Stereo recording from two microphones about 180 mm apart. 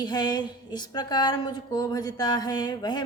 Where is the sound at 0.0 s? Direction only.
25° left (ahead or behind).